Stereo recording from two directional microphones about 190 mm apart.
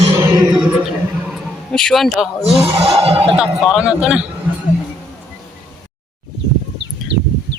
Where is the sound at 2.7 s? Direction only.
30° right (ahead or behind).